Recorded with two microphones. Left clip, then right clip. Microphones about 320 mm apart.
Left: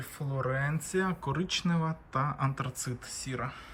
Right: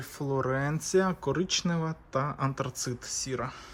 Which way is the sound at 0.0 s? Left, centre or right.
Centre.